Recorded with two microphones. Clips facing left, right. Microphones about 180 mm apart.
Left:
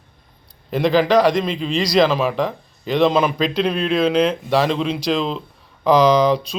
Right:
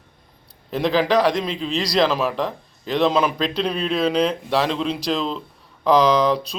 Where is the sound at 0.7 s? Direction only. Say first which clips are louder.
Left 3 dB; centre (ahead or behind).